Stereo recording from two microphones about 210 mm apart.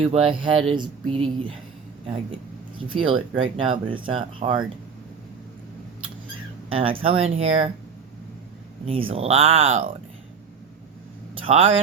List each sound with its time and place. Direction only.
0.1 s speech: 25° right (ahead or behind)
2.8 s speech: 25° right (ahead or behind)
6.7 s speech: 25° right (ahead or behind)
8.9 s speech: 25° right (ahead or behind)
9.5 s speech: 70° right (ahead or behind)
11.5 s speech: 30° right (ahead or behind)